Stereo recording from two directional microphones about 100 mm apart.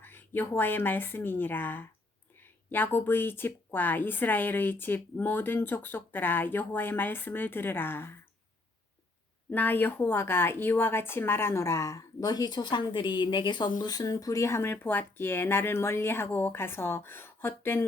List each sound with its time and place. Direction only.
0.0 s a woman's voice: 20° left (ahead or behind)
9.5 s a woman's voice: 20° left (ahead or behind)